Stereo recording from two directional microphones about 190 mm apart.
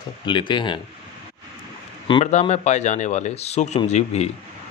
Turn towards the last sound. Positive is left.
turn(degrees=35)  # may be behind; listen again after turning